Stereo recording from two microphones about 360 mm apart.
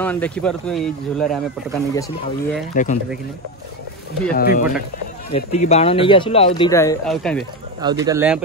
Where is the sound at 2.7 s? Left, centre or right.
Left.